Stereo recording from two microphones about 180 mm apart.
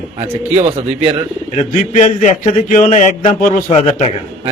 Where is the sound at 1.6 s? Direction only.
40° left (ahead or behind).